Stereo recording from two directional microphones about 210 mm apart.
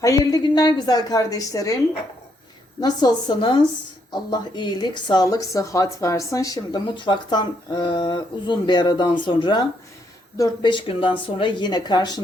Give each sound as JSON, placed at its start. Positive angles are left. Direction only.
{"t": 0.0, "sound": "a woman's voice", "side_deg": 15}
{"t": 2.8, "sound": "a woman's voice", "side_deg": 20}